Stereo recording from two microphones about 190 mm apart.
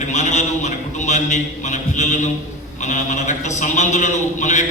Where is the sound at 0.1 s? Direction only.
40° left (ahead or behind).